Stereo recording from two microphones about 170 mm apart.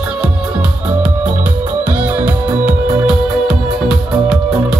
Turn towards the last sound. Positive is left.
turn(degrees=-5)  # may be behind; listen again after turning